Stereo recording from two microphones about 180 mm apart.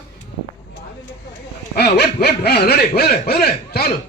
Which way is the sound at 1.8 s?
65° left (ahead or behind).